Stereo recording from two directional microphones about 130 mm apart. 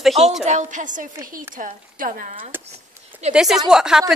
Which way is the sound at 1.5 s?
90° right.